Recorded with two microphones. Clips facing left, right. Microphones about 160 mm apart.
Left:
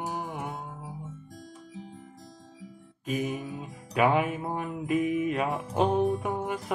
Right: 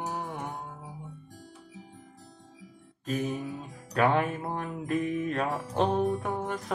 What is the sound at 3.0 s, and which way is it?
Music, 5° left (ahead or behind).